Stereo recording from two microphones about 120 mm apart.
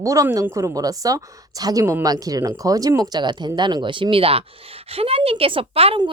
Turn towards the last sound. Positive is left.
turn(degrees=-50)  # may be behind; listen again after turning